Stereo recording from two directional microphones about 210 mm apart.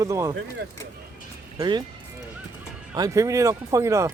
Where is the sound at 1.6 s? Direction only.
20° right (ahead or behind).